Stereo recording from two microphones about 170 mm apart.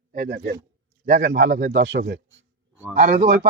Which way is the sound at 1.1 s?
90° right.